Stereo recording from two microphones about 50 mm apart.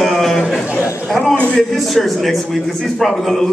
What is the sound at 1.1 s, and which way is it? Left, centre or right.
Speech, centre.